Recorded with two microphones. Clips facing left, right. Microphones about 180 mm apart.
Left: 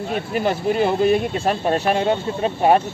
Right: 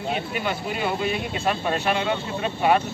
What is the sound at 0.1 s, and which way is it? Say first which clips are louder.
Speech: left 6 dB; 40° left (ahead or behind).